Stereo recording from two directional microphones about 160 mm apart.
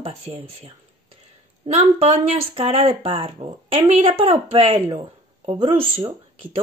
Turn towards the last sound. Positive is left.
turn(degrees=-35)  # may be behind; listen again after turning